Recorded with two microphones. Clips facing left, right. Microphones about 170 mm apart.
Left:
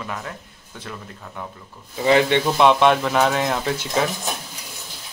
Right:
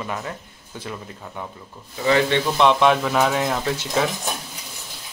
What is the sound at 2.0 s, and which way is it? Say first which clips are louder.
Speech: left 2 dB; 15° left (ahead or behind).